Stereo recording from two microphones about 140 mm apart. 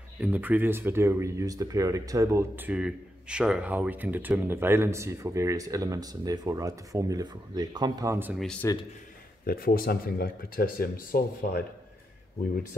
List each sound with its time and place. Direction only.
0.2 s speech: 10° right (ahead or behind)
8.4 s speech: 5° left (ahead or behind)
9.5 s speech: 90° left